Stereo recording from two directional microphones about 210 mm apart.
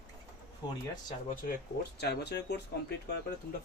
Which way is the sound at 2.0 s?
50° left (ahead or behind).